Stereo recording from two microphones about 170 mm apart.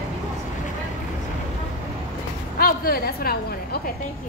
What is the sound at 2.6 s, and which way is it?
A woman's voice, 60° left (ahead or behind).